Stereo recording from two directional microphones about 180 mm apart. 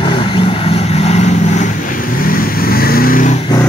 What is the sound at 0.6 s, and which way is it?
Vehicle, 35° left (ahead or behind).